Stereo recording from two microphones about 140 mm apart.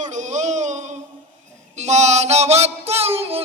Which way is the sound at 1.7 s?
55° right (ahead or behind).